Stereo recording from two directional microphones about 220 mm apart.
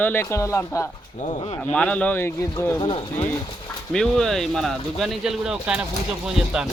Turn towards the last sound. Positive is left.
turn(degrees=-5)  # may be behind; listen again after turning